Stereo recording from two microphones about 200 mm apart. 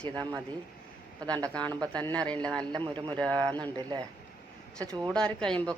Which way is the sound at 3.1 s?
5° left (ahead or behind).